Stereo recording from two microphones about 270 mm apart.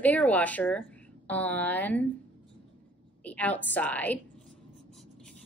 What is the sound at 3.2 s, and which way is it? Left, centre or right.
Writing, centre.